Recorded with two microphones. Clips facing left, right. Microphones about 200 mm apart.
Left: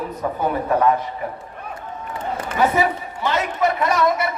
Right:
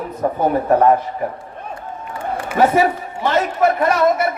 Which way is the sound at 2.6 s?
45° right (ahead or behind).